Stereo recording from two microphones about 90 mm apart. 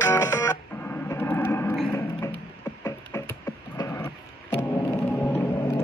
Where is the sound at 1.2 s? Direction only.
20° left (ahead or behind).